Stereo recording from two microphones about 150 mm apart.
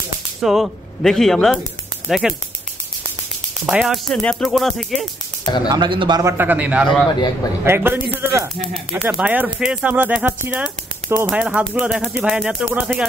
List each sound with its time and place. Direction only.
0.4 s speech: centre (ahead or behind)
3.6 s speech: centre (ahead or behind)
5.4 s speech: 30° left (ahead or behind)
5.7 s speech: 30° right (ahead or behind)
6.3 s speech: 10° right (ahead or behind)